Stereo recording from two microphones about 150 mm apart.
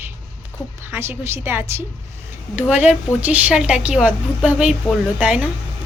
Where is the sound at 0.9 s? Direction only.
15° right (ahead or behind).